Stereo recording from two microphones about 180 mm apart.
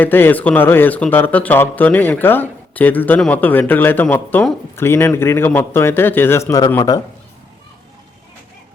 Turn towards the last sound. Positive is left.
turn(degrees=15)  # may be behind; listen again after turning